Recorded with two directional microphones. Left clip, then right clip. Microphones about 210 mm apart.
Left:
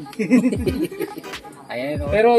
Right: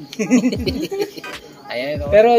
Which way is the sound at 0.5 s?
15° left (ahead or behind).